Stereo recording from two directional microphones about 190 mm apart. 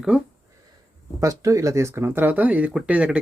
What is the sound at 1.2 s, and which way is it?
Speech, 15° right (ahead or behind).